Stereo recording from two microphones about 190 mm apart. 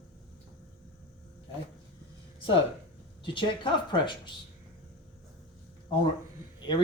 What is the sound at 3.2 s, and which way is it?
Speech, 25° left (ahead or behind).